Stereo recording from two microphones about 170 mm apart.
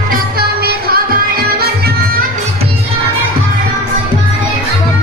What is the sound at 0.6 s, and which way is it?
Music, 65° right (ahead or behind).